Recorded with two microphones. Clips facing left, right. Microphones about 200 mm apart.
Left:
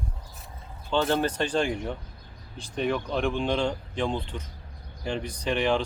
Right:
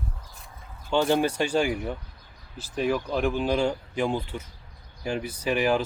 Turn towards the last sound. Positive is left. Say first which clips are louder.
# right 1 dB
turn(degrees=-5)  # may be behind; listen again after turning